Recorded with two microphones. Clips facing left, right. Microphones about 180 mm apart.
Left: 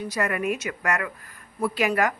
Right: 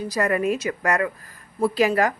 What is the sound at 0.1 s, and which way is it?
A woman's voice, 35° right (ahead or behind).